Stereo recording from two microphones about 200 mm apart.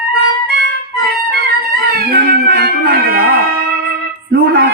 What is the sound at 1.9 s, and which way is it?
Music, 50° right (ahead or behind).